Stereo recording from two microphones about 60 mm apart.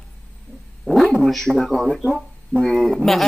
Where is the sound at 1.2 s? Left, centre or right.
Centre.